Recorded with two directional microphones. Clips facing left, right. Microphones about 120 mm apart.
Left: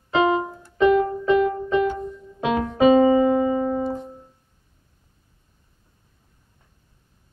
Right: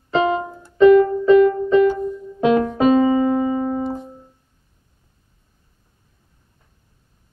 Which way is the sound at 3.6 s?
5° right (ahead or behind).